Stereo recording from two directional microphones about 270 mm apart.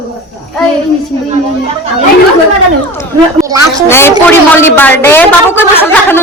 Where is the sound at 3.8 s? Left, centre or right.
Centre.